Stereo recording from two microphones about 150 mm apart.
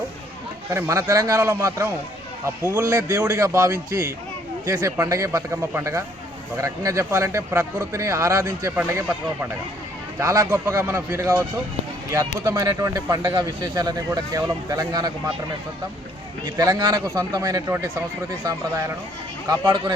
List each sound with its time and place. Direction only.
0.7 s speech: 20° right (ahead or behind)
16.6 s speech: 25° right (ahead or behind)
19.5 s speech: 30° right (ahead or behind)